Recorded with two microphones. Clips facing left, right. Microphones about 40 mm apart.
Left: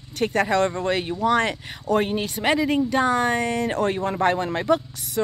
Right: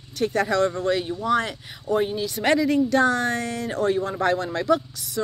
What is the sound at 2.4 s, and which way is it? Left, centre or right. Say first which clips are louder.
Speech: right 1 dB; centre.